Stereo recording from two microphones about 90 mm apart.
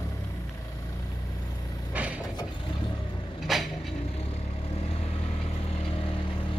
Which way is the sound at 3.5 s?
Centre (ahead or behind).